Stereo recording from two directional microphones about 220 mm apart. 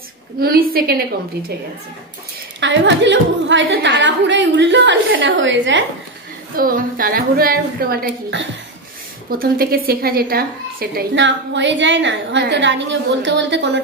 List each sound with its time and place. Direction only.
0.4 s a woman's voice: 45° right (ahead or behind)
2.6 s a woman's voice: 55° right (ahead or behind)
6.5 s a woman's voice: 40° right (ahead or behind)